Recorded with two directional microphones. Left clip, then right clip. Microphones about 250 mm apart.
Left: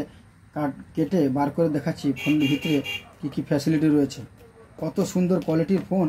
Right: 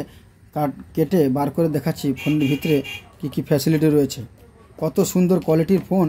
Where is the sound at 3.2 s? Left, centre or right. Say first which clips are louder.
Right 6 dB; right.